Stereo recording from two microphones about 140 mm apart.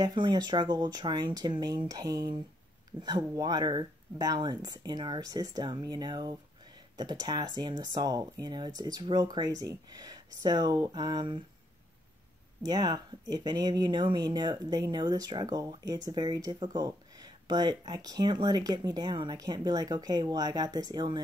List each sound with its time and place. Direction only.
0.0 s speech: 30° right (ahead or behind)
12.6 s speech: 25° right (ahead or behind)